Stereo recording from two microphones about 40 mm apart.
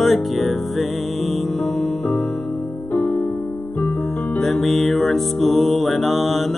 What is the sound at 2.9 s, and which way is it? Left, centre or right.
Music, left.